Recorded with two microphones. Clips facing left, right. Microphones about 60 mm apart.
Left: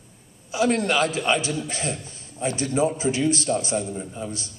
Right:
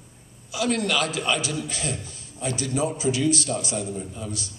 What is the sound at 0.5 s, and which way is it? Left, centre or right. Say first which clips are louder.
A man's voice: left 3 dB; left.